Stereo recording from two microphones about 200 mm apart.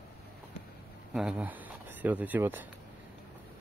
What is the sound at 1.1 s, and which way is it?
Speech, 5° right (ahead or behind).